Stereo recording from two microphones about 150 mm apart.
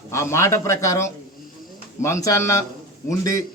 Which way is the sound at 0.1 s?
20° left (ahead or behind).